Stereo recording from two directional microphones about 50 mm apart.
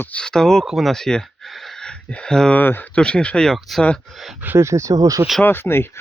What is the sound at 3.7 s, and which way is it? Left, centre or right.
Speech, centre.